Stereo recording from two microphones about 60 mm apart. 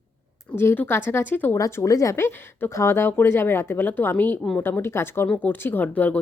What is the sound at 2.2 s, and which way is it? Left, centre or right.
Speech, left.